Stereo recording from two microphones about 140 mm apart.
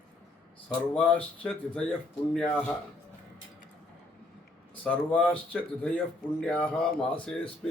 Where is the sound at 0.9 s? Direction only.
10° left (ahead or behind).